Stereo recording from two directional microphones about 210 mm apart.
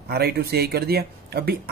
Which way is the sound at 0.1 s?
50° right (ahead or behind).